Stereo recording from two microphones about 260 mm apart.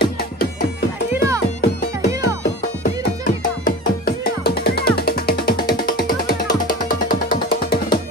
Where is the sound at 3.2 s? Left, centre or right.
Left.